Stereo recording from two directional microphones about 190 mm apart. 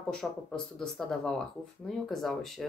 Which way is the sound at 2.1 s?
Centre (ahead or behind).